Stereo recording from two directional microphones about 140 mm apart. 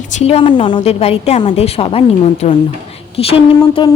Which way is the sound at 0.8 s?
45° left (ahead or behind).